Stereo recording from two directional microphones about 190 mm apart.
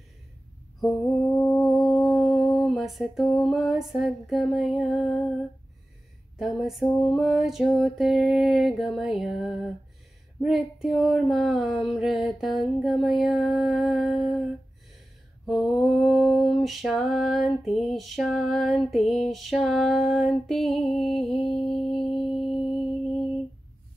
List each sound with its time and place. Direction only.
1.3 s mantra: centre (ahead or behind)
3.9 s a sound: centre (ahead or behind)
6.3 s a sound: centre (ahead or behind)
21.3 s music: 30° left (ahead or behind)
22.0 s music: centre (ahead or behind)
22.4 s mantra: 30° left (ahead or behind)